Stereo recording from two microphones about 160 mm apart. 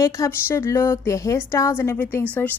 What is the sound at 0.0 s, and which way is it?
A woman's voice, 20° left (ahead or behind).